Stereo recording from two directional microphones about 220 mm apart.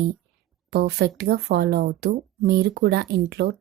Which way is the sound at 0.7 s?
45° right (ahead or behind).